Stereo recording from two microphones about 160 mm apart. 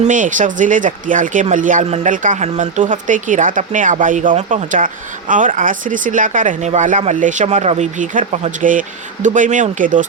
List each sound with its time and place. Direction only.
0.0 s speech: 55° right (ahead or behind)